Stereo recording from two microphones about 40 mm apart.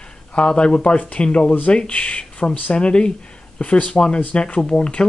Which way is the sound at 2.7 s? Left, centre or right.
Left.